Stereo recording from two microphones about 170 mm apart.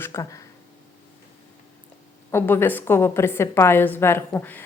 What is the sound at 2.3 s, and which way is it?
Speech, 15° left (ahead or behind).